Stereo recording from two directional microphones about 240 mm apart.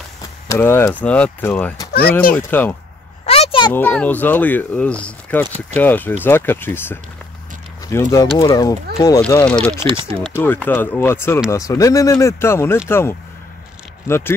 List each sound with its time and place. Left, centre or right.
0.5 s speech: centre
3.3 s a sound: left
3.7 s speech: centre
9.8 s speech: right
10.4 s speech: centre